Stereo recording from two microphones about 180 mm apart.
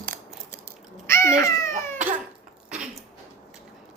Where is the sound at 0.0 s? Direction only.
10° left (ahead or behind).